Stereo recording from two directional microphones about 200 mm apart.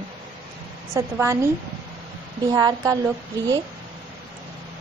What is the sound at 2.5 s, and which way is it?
A woman's voice, 20° right (ahead or behind).